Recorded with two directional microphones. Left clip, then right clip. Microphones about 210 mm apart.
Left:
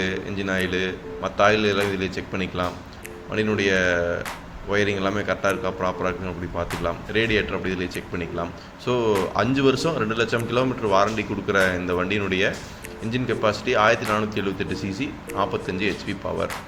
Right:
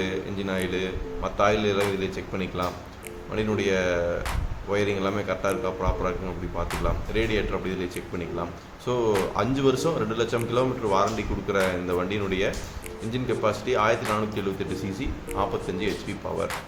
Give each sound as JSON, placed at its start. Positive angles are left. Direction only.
{"t": 0.0, "sound": "speech", "side_deg": 5}